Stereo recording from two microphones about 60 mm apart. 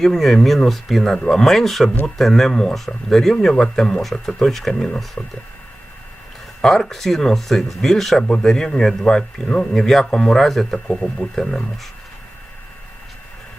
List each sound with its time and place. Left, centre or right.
0.0 s a man's voice: centre
5.2 s speech: left
6.6 s a man's voice: centre